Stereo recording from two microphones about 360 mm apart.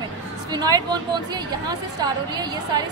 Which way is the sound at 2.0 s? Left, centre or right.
Centre.